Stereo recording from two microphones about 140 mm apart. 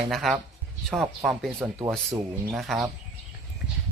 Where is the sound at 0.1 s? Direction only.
Centre (ahead or behind).